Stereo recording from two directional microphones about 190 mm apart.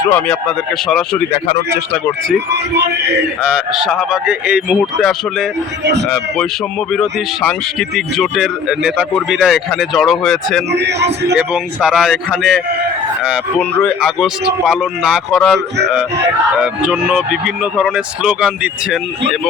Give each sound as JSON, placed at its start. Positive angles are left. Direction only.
{"t": 0.0, "sound": "speech", "side_deg": 10}
{"t": 2.5, "sound": "speech", "side_deg": -65}
{"t": 3.4, "sound": "speech", "side_deg": 0}
{"t": 10.7, "sound": "speech", "side_deg": -65}
{"t": 11.3, "sound": "speech", "side_deg": -5}